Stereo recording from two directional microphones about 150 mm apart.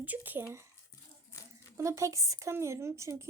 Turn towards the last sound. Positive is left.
turn(degrees=-20)  # may be behind; listen again after turning